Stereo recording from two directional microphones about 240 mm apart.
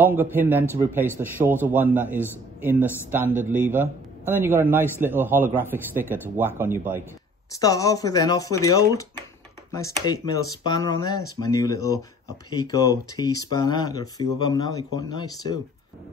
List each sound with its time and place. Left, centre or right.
0.0 s a man's voice: centre
7.5 s speech: centre